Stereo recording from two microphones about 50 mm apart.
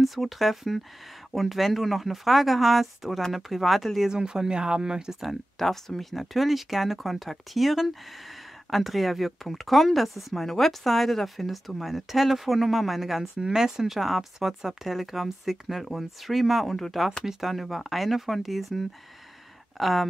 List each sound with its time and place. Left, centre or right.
0.0 s speech: centre
4.1 s speech: centre
5.2 s speech: centre
17.2 s speech: centre